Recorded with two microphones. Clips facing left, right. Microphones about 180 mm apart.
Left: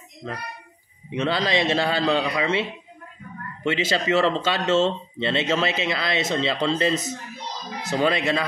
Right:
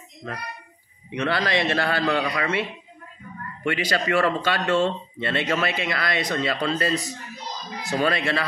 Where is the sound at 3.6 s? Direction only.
25° left (ahead or behind).